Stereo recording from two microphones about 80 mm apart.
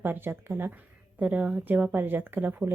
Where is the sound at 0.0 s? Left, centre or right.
Right.